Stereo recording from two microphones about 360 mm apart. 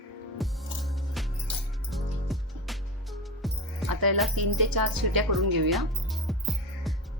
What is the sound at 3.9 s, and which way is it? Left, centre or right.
Music, right.